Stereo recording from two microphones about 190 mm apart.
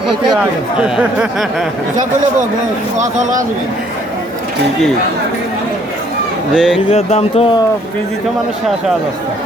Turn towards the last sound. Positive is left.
turn(degrees=30)  # may be behind; listen again after turning